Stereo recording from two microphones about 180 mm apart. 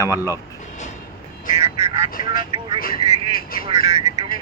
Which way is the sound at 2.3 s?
25° right (ahead or behind).